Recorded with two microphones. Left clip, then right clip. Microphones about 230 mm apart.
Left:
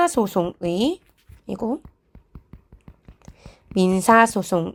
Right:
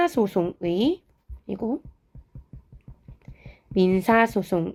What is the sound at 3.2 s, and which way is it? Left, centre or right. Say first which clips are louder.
A woman's voice: left 3 dB; left.